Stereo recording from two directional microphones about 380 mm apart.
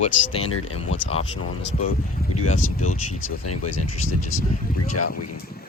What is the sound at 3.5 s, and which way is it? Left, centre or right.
Speech, left.